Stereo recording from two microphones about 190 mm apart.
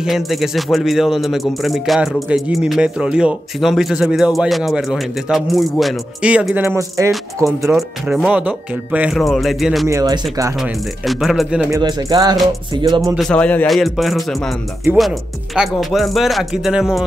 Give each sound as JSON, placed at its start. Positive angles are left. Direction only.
{"t": 0.0, "sound": "speech", "side_deg": 0}
{"t": 7.7, "sound": "speech", "side_deg": -5}
{"t": 9.8, "sound": "speech", "side_deg": -20}
{"t": 10.6, "sound": "speech", "side_deg": 0}
{"t": 11.7, "sound": "speech", "side_deg": -20}
{"t": 13.1, "sound": "speech", "side_deg": 5}